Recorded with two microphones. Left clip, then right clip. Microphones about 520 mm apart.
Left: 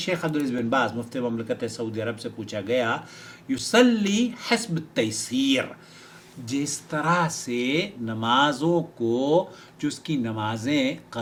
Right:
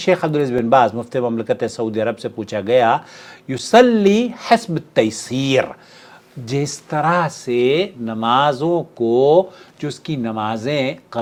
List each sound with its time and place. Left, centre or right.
0.0 s speech: right